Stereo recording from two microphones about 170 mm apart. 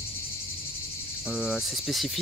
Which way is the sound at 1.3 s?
5° right (ahead or behind).